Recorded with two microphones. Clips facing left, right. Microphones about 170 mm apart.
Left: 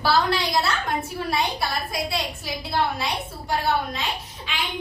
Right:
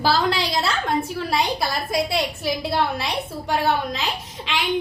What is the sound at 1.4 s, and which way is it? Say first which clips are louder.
Speech: right 3 dB; 90° right.